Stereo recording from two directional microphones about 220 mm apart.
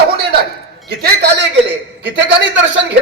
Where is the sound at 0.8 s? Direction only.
50° right (ahead or behind).